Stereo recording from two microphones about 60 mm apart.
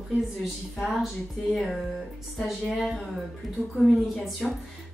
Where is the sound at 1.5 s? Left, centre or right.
Centre.